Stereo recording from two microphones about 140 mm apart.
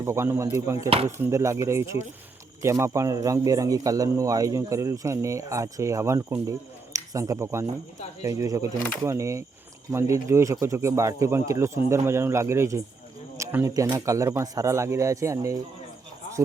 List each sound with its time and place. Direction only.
0.0 s speech: 20° right (ahead or behind)